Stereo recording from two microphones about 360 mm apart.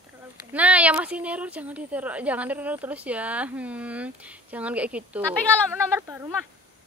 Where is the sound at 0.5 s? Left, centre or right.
Centre.